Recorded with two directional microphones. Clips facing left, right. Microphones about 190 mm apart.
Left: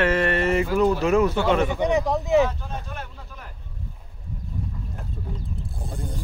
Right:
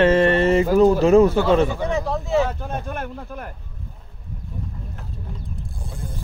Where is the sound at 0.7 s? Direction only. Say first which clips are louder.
Right 8 dB; 40° right (ahead or behind).